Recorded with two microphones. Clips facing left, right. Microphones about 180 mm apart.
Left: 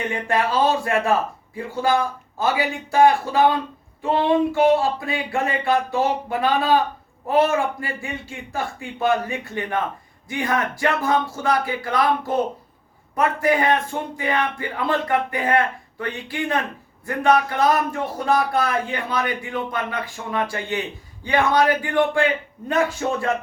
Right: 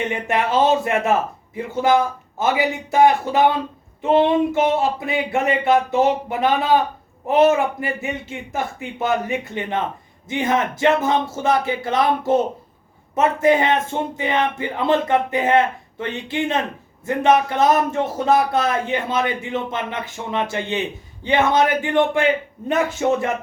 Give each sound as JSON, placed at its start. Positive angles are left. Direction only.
{"t": 0.1, "sound": "speech", "side_deg": -20}